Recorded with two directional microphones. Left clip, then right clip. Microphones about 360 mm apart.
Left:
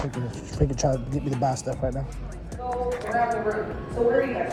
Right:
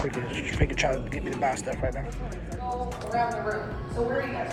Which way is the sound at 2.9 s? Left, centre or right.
Centre.